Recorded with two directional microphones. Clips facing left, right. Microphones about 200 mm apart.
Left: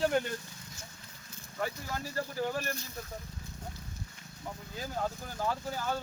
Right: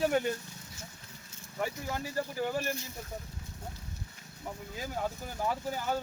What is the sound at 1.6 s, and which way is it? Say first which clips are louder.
Speech: right 1 dB; 15° right (ahead or behind).